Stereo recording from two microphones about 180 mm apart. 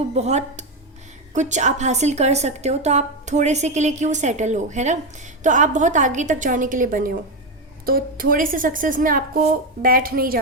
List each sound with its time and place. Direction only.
0.1 s a woman's voice: 35° right (ahead or behind); by 10.3 s 55° right (ahead or behind)